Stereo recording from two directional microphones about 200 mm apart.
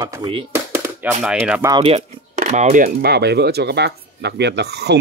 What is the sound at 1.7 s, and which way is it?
Speech, 30° right (ahead or behind).